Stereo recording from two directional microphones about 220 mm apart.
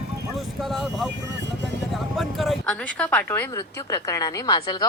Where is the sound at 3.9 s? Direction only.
15° left (ahead or behind).